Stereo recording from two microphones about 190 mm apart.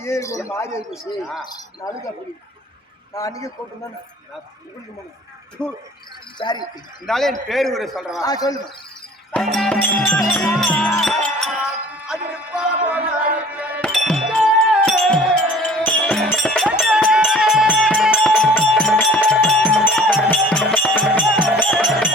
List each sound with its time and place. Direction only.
0.0 s speech: 15° left (ahead or behind)
0.9 s music: centre (ahead or behind)
1.5 s speech: 20° left (ahead or behind)
3.2 s speech: 20° left (ahead or behind)
5.6 s music: 5° left (ahead or behind)
6.4 s speech: 25° left (ahead or behind)
7.0 s music: centre (ahead or behind)
8.2 s speech: 20° left (ahead or behind)
9.3 s music: centre (ahead or behind)
10.3 s speech: 5° left (ahead or behind)
12.0 s music: 5° right (ahead or behind)
13.8 s wind chime: centre (ahead or behind)
16.3 s music: 5° left (ahead or behind)